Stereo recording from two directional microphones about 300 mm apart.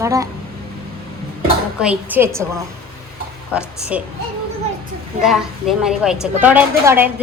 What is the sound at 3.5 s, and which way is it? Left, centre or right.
Speech, centre.